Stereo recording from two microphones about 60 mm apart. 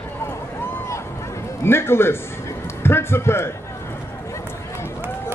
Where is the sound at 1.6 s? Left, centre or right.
Left.